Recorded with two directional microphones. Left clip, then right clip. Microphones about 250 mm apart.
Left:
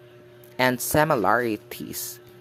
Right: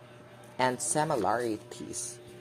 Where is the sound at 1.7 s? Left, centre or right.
Left.